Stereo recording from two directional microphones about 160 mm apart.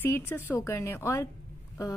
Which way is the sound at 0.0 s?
15° left (ahead or behind).